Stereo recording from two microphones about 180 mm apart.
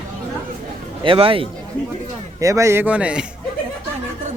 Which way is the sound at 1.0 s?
30° right (ahead or behind).